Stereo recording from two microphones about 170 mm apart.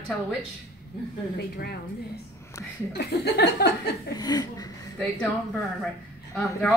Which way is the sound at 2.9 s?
75° left (ahead or behind).